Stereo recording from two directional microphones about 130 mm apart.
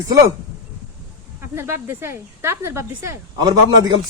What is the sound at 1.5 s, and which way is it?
A woman's voice, 20° right (ahead or behind).